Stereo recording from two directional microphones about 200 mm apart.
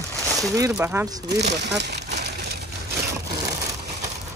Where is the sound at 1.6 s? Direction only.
60° right (ahead or behind).